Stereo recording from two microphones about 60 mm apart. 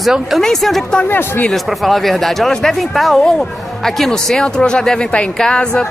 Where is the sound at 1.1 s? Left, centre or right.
Left.